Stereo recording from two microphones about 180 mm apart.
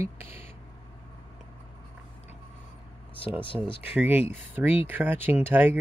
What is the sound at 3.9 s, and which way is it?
Speech, 10° right (ahead or behind).